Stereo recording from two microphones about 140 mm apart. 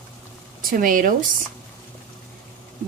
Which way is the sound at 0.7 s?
85° right.